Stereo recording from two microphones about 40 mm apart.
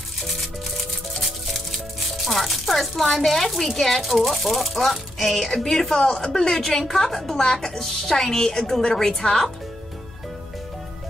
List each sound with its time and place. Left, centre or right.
0.2 s music: centre
4.0 s a woman's voice: centre